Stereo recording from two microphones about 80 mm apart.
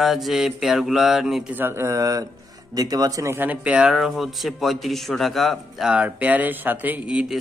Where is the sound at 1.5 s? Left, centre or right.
Right.